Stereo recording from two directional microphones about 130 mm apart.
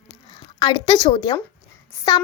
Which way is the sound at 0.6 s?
45° left (ahead or behind).